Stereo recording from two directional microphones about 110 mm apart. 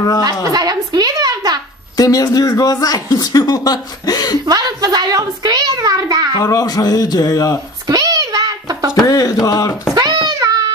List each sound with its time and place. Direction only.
0.2 s speech: 35° right (ahead or behind)
2.0 s speech: 35° left (ahead or behind)
4.5 s a child's voice: 35° right (ahead or behind)
6.4 s speech: 35° left (ahead or behind)
7.8 s a sound: 35° right (ahead or behind)
8.9 s speech: 35° left (ahead or behind)
9.9 s a sound: 35° right (ahead or behind)